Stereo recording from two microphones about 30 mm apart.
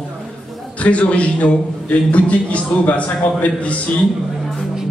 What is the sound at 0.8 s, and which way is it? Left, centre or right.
A man's voice, left.